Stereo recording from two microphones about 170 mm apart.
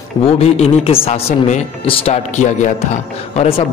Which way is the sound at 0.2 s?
35° left (ahead or behind).